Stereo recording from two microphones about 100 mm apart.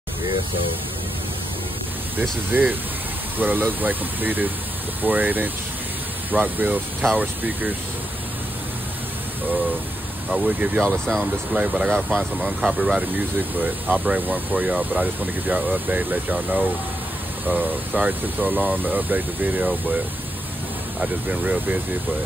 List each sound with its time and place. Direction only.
2.5 s speech: 20° right (ahead or behind)
10.3 s speech: 10° right (ahead or behind)
10.9 s speech: 5° left (ahead or behind)
11.5 s speech: 10° right (ahead or behind)
14.0 s speech: 15° right (ahead or behind)
21.3 s speech: 15° right (ahead or behind)